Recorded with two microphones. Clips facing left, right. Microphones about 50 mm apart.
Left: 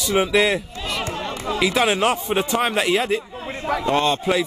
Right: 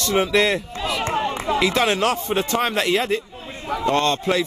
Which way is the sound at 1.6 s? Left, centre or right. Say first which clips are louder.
Left 2 dB; centre.